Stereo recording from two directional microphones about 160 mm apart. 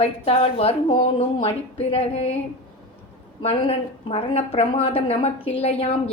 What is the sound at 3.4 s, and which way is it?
A woman's voice, 35° left (ahead or behind).